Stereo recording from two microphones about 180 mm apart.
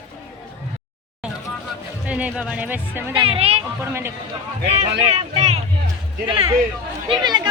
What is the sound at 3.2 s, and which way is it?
Speech, 30° right (ahead or behind).